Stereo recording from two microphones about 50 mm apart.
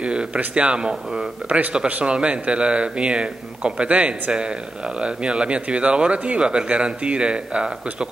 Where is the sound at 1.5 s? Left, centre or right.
Right.